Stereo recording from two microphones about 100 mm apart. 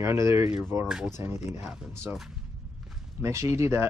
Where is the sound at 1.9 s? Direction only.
25° right (ahead or behind).